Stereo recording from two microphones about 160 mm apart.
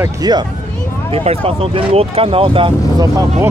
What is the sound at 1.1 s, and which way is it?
Speech, 40° right (ahead or behind).